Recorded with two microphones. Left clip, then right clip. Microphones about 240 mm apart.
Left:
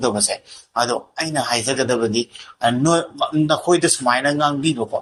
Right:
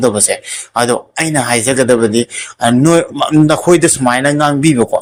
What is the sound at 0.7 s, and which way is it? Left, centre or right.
Speech, right.